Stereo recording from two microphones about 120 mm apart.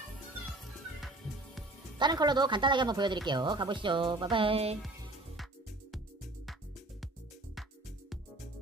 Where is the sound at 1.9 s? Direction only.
35° right (ahead or behind).